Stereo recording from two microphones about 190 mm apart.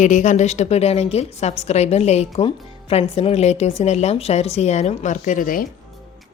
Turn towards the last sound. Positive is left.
turn(degrees=45)  # may be behind; listen again after turning